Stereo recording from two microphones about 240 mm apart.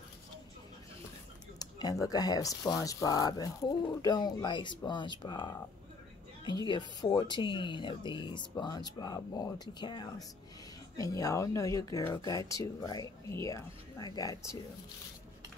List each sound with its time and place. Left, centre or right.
1.6 s speech: centre
6.7 s speech: centre